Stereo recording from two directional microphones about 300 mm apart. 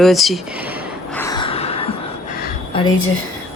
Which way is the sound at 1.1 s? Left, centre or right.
Centre.